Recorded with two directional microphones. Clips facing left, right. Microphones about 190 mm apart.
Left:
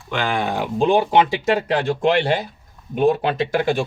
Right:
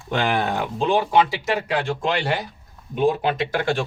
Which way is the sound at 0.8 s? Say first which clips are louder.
Left 3 dB; 25° left (ahead or behind).